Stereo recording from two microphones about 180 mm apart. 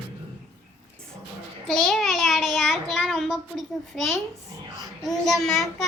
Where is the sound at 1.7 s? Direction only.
Centre (ahead or behind).